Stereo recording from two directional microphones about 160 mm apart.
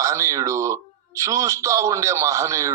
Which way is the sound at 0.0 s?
20° right (ahead or behind).